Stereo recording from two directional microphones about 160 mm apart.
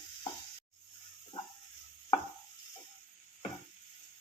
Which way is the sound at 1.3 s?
30° left (ahead or behind).